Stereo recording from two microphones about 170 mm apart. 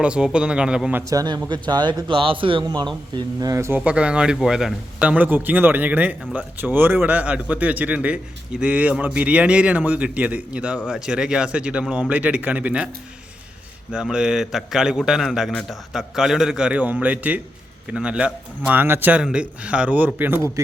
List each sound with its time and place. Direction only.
0.0 s a man's voice: 5° right (ahead or behind)
1.1 s a man's voice: 25° right (ahead or behind); by 12.9 s 10° right (ahead or behind)
13.9 s a man's voice: 5° right (ahead or behind)